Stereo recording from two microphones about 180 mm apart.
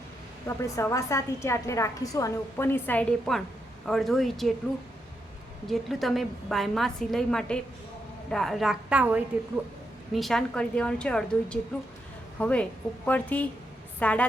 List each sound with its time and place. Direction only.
0.4 s a woman's voice: 15° left (ahead or behind)
5.6 s a woman's voice: centre (ahead or behind)